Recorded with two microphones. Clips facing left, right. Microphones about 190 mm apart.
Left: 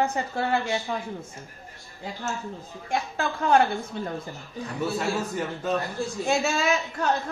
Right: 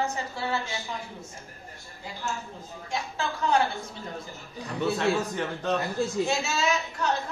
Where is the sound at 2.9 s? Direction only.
55° left (ahead or behind).